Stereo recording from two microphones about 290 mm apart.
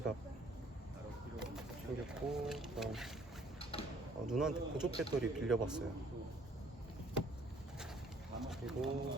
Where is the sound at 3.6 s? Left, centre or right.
Centre.